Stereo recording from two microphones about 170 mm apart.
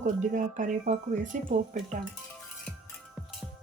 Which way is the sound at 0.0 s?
45° right (ahead or behind).